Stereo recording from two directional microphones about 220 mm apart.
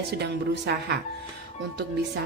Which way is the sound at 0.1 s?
50° right (ahead or behind).